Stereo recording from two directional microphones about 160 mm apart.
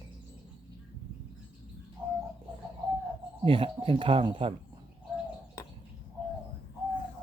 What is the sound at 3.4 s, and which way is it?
Speech, 35° right (ahead or behind).